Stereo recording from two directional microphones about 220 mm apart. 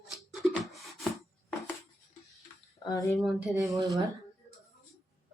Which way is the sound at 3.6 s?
15° right (ahead or behind).